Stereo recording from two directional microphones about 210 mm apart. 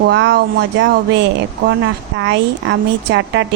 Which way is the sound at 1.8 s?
60° right (ahead or behind).